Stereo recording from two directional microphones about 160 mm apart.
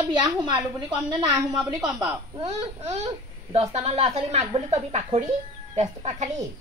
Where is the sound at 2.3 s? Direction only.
40° right (ahead or behind).